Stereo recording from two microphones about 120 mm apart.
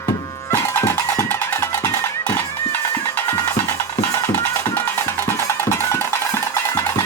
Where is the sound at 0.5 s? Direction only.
20° left (ahead or behind).